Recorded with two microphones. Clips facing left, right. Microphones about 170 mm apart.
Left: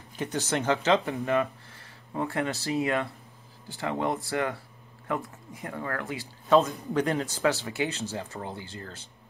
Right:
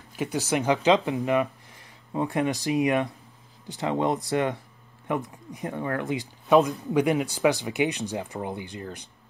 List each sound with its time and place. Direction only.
0.1 s speech: 10° right (ahead or behind)